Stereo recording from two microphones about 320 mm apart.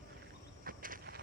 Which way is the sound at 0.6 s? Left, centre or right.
Right.